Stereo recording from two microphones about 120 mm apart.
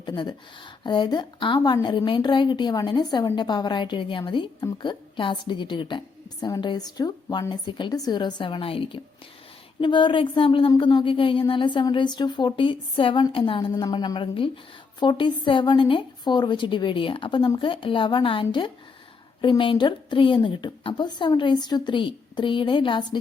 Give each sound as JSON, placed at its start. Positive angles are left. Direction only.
{"t": 0.0, "sound": "a woman's voice", "side_deg": 35}